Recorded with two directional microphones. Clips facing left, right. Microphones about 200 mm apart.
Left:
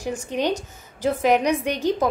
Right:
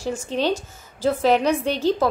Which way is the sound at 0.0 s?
15° left (ahead or behind).